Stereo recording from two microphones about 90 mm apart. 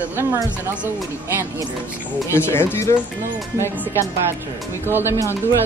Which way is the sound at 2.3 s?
25° left (ahead or behind).